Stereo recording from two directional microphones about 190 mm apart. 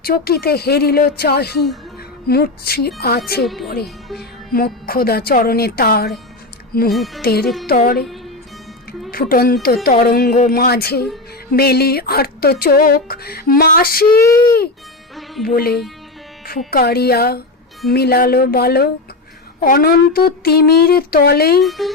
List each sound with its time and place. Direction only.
0.0 s a woman's voice: 55° left (ahead or behind)
3.4 s speech: centre (ahead or behind)
4.2 s speech: 50° left (ahead or behind)
6.9 s speech: centre (ahead or behind)
7.2 s a woman's voice: 55° left (ahead or behind)
7.4 s speech: centre (ahead or behind)
7.7 s speech: 50° left (ahead or behind)
9.0 s speech: 50° left (ahead or behind)
15.4 s a woman's voice: 55° left (ahead or behind)
21.6 s speech: centre (ahead or behind)